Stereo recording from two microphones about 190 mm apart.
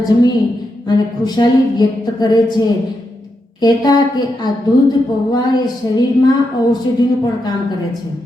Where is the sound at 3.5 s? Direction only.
20° left (ahead or behind).